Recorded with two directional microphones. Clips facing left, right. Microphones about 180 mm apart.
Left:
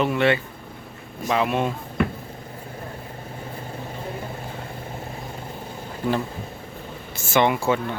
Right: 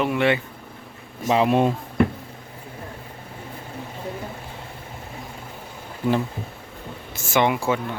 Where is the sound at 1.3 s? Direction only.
30° right (ahead or behind).